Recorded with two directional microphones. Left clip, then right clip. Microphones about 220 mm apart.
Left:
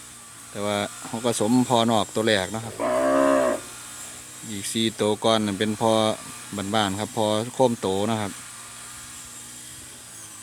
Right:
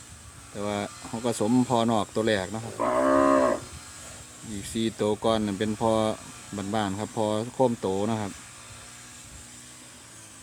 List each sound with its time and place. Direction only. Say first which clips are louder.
0.5 s speech: left 5 dB; centre (ahead or behind)
2.7 s livestock: left 1 dB; 60° right (ahead or behind)
4.5 s speech: left 4 dB; centre (ahead or behind)